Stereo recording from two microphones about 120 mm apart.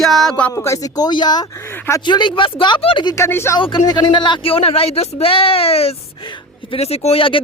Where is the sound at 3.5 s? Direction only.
40° left (ahead or behind).